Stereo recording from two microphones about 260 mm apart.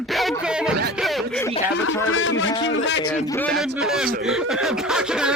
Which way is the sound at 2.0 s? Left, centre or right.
Left.